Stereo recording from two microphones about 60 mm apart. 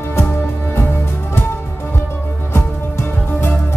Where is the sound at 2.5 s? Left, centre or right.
Left.